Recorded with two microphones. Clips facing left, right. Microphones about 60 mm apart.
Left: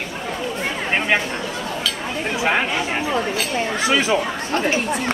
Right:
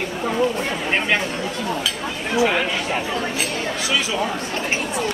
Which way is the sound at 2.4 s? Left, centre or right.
Left.